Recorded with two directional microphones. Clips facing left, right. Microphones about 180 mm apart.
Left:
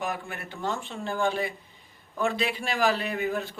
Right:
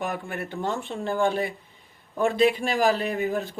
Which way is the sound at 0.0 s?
50° right (ahead or behind).